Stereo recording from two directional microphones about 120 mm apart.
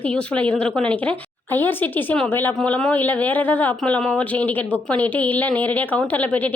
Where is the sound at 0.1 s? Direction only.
10° left (ahead or behind).